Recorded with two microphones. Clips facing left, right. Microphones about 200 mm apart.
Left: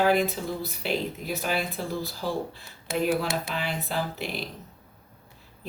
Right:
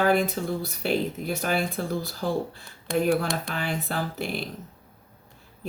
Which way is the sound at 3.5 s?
50° right (ahead or behind).